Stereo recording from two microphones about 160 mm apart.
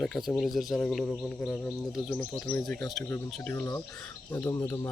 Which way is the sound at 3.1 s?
15° left (ahead or behind).